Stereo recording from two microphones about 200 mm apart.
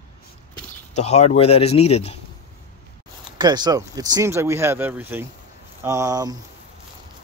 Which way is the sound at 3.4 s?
20° right (ahead or behind).